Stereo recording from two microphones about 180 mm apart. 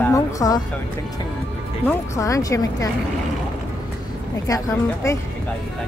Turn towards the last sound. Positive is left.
turn(degrees=15)  # may be behind; listen again after turning